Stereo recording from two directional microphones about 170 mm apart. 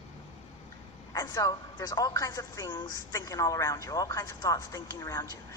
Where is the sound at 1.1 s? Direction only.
20° left (ahead or behind).